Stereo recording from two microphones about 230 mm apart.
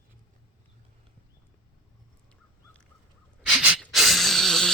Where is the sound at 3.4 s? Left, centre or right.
Centre.